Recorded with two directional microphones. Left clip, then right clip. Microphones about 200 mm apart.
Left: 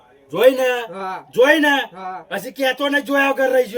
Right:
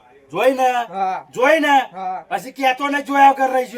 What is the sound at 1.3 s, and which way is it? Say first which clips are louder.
Speech: left 1 dB; 25° right (ahead or behind).